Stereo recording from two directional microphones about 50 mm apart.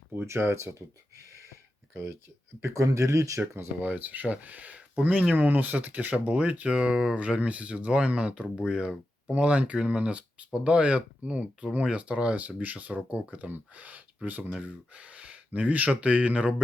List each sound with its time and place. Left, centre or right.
0.3 s speech: right
1.9 s speech: right
2.6 s speech: right
3.8 s speech: right
6.7 s speech: centre